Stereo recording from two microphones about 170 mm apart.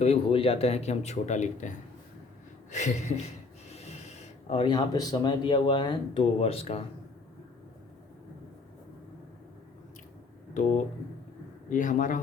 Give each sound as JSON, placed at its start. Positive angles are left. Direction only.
{"t": 0.0, "sound": "speech", "side_deg": 35}
{"t": 2.7, "sound": "speech", "side_deg": 45}
{"t": 11.7, "sound": "speech", "side_deg": 50}